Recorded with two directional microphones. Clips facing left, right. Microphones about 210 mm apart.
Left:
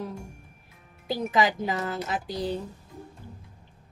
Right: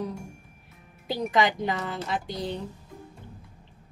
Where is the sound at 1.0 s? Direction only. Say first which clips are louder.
Even; centre (ahead or behind).